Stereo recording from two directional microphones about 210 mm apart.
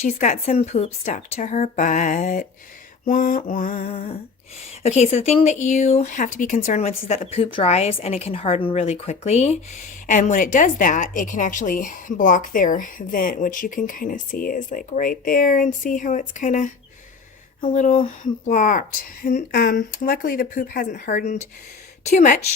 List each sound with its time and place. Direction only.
0.2 s a woman's voice: 35° left (ahead or behind)
3.7 s a sound: 30° left (ahead or behind)
4.8 s a woman's voice: 30° left (ahead or behind)